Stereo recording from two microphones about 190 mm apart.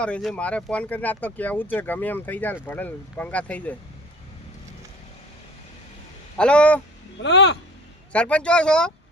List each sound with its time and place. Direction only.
0.0 s speech: 5° left (ahead or behind)
6.3 s speech: 5° left (ahead or behind)
7.2 s speech: 65° left (ahead or behind)
8.1 s speech: 5° left (ahead or behind)